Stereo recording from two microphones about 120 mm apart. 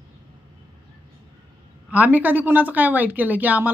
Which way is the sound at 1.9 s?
15° right (ahead or behind).